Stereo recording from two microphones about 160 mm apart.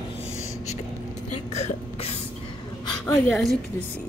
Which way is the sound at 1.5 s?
40° left (ahead or behind).